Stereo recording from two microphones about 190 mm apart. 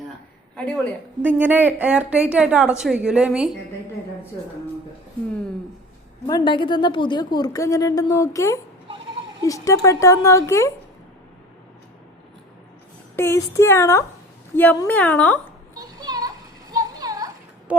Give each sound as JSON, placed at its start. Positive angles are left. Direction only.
{"t": 0.5, "sound": "a woman's voice", "side_deg": 5}
{"t": 1.2, "sound": "a woman's voice", "side_deg": -10}
{"t": 6.2, "sound": "a woman's voice", "side_deg": 25}
{"t": 13.1, "sound": "speech", "side_deg": 15}
{"t": 15.7, "sound": "a sound", "side_deg": -20}
{"t": 17.7, "sound": "speech", "side_deg": -5}